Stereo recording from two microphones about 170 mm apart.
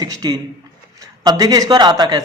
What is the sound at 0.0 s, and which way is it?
A man's voice, 25° right (ahead or behind).